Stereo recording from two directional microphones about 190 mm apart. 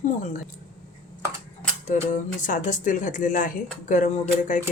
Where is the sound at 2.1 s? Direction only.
45° left (ahead or behind).